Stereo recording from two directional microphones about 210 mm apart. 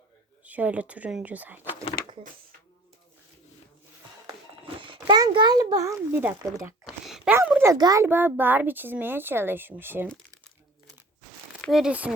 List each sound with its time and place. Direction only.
0.4 s a child's voice: 5° right (ahead or behind)
4.8 s a child's voice: 25° right (ahead or behind)
11.6 s speech: centre (ahead or behind)